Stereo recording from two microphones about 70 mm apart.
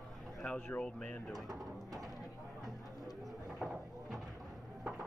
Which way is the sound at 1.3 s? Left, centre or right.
Right.